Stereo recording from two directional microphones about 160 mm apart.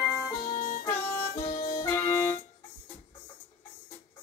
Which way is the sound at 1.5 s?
60° left (ahead or behind).